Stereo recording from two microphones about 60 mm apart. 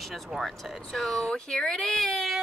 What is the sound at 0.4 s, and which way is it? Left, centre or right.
Speech, centre.